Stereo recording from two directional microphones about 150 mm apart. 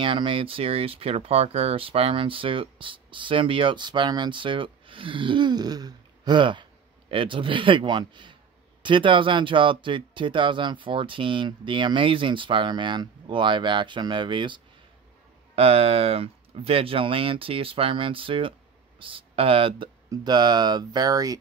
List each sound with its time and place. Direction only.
0.0 s speech: 35° right (ahead or behind)